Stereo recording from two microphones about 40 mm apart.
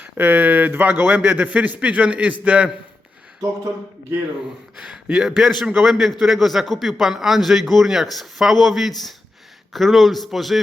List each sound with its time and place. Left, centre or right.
0.0 s a man's voice: right
5.1 s a man's voice: centre